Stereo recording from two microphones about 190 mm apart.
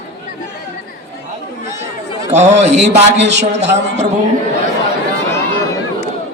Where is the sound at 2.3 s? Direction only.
35° right (ahead or behind).